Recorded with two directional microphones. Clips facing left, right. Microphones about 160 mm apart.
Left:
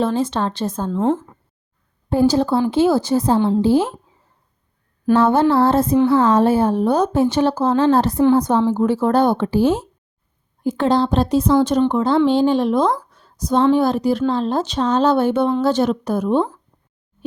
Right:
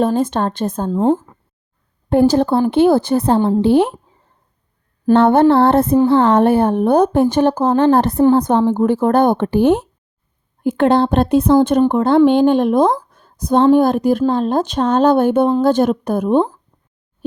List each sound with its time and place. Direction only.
0.0 s speech: 50° right (ahead or behind)
0.9 s speech: 35° right (ahead or behind)
2.0 s a woman's voice: 60° right (ahead or behind)
5.1 s a woman's voice: 60° right (ahead or behind)